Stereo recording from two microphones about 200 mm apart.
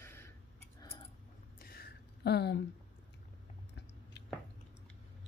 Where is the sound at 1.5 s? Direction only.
50° left (ahead or behind).